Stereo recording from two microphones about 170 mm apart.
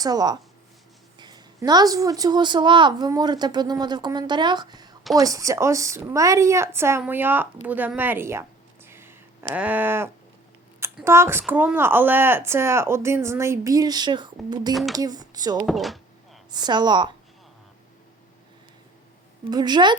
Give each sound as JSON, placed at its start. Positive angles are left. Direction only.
{"t": 0.0, "sound": "a woman's voice", "side_deg": -25}
{"t": 14.7, "sound": "speech", "side_deg": 0}
{"t": 14.9, "sound": "a woman's voice", "side_deg": -20}
{"t": 15.6, "sound": "a sound", "side_deg": 0}
{"t": 16.5, "sound": "a woman's voice", "side_deg": -25}
{"t": 19.5, "sound": "a woman's voice", "side_deg": -25}